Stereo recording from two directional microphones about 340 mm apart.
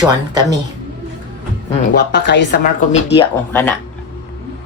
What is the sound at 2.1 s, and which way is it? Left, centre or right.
Speech, left.